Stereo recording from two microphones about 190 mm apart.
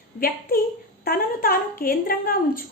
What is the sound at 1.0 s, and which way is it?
A woman's voice, 50° left (ahead or behind).